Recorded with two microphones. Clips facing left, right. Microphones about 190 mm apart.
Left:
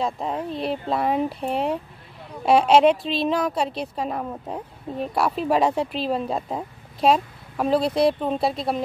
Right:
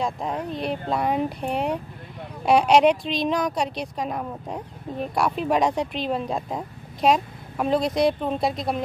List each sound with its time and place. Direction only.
0.5 s a woman's voice: centre (ahead or behind)
7.8 s speech: 30° left (ahead or behind)
8.2 s speech: centre (ahead or behind)